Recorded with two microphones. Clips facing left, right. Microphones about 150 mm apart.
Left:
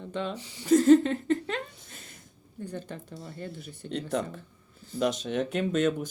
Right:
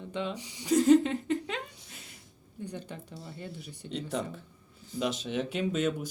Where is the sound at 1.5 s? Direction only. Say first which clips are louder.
Left 3 dB; 50° left (ahead or behind).